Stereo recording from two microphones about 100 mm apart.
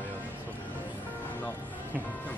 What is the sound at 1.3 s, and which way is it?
Music, 20° left (ahead or behind).